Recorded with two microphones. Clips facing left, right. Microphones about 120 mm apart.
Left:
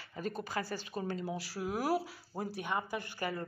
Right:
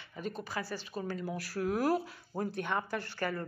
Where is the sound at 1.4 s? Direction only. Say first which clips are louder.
Right 4 dB; 10° left (ahead or behind).